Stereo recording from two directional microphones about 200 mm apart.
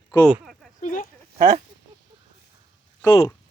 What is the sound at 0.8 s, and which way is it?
Speech, 40° left (ahead or behind).